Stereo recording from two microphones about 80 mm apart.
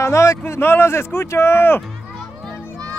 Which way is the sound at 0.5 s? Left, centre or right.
Left.